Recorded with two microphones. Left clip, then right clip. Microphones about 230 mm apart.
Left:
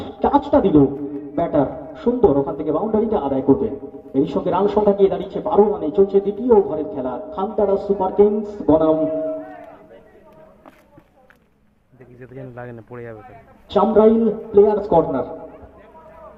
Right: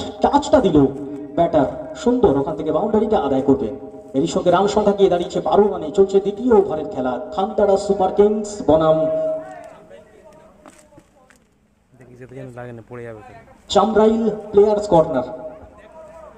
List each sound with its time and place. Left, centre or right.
0.0 s a man's voice: right
12.2 s speech: centre
13.7 s a man's voice: right